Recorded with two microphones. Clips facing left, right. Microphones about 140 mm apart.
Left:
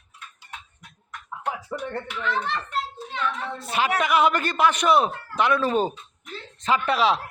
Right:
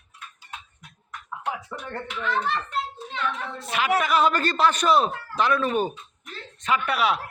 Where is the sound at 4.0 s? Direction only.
15° left (ahead or behind).